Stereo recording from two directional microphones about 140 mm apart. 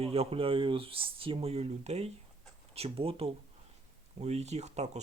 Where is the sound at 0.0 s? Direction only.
45° right (ahead or behind).